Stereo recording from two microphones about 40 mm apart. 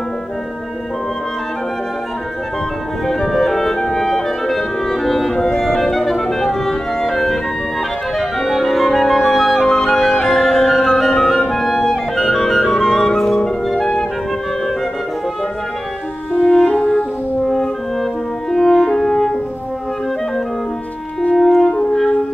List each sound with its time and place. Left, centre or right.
3.1 s clarinet: centre
8.5 s music: centre
16.3 s music: centre
18.5 s french horn: centre
21.4 s french horn: centre